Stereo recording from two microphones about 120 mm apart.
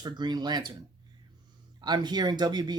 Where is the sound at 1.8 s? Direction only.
35° right (ahead or behind).